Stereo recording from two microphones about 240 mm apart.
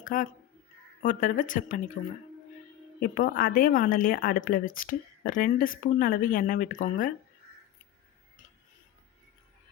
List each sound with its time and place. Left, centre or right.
0.0 s speech: left
3.0 s speech: left